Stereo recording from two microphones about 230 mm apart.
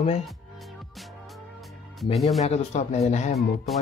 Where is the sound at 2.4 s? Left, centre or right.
Left.